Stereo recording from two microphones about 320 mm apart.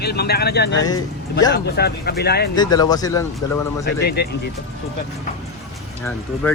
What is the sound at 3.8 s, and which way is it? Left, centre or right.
Speech, left.